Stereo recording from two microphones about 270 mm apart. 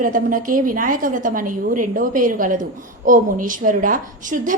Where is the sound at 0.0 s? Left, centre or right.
Right.